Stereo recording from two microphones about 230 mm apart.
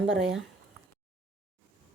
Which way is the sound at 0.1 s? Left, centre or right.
Right.